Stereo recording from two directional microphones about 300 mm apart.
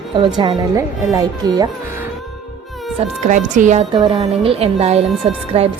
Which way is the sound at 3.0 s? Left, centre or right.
Right.